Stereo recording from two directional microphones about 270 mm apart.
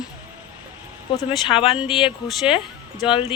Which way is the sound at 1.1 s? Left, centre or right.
Centre.